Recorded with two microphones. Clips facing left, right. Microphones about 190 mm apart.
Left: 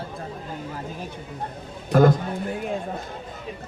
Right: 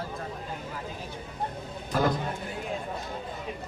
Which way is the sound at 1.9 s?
50° left (ahead or behind).